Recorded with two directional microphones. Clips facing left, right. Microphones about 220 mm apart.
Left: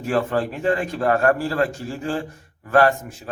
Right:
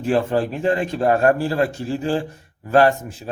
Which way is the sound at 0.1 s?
25° right (ahead or behind).